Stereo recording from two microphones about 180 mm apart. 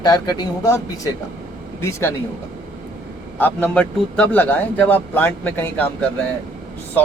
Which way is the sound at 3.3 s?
10° left (ahead or behind).